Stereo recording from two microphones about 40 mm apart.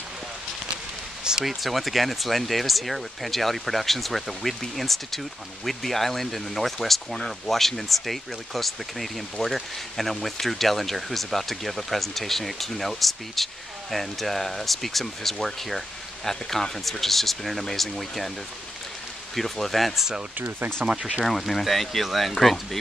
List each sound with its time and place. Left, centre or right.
1.4 s speech: centre
19.3 s speech: centre
20.9 s speech: centre
21.3 s speech: centre